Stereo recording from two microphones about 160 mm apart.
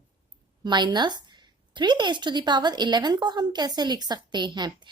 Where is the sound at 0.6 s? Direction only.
30° right (ahead or behind).